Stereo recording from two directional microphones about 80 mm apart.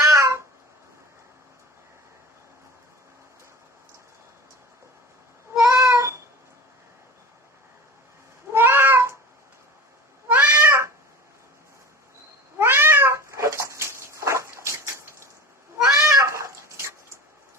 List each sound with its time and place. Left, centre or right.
0.0 s cat: right
5.6 s cat: right
8.5 s cat: right
10.2 s cat: right
12.5 s cat: right
16.0 s a sound: right